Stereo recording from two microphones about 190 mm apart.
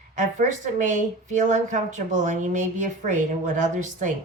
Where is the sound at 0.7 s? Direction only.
40° right (ahead or behind).